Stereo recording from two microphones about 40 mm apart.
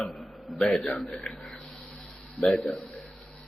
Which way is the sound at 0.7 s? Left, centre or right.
Centre.